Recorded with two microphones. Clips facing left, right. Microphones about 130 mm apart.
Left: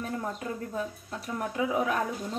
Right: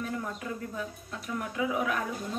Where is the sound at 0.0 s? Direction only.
35° left (ahead or behind).